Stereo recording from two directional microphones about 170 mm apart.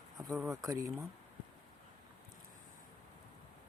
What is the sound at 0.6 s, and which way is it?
Speech, 20° right (ahead or behind).